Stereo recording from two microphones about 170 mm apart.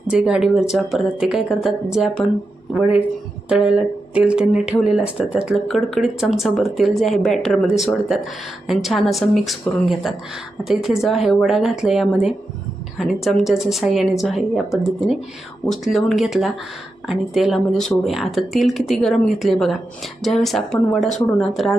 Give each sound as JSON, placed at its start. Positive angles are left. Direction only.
{"t": 0.1, "sound": "speech", "side_deg": -5}